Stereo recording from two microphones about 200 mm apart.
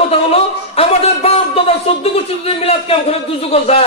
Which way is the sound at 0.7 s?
30° left (ahead or behind).